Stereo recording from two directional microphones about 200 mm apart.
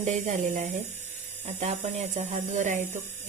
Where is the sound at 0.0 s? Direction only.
35° right (ahead or behind).